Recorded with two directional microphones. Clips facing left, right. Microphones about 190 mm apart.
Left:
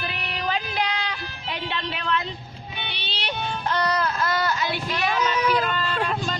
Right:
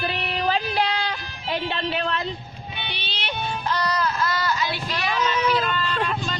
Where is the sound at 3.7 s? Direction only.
55° left (ahead or behind).